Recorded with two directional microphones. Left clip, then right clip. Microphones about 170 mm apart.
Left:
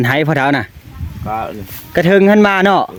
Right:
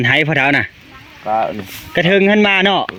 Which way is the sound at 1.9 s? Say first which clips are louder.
Left 2 dB; 50° left (ahead or behind).